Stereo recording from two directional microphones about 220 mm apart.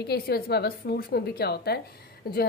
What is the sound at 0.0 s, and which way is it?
A woman's voice, 45° left (ahead or behind).